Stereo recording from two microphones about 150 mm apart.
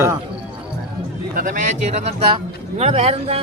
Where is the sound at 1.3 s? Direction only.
60° right (ahead or behind).